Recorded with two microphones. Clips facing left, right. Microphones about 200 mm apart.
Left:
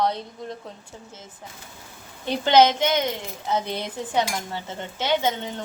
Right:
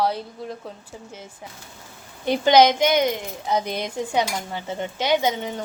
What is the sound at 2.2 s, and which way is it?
A woman's voice, 15° right (ahead or behind).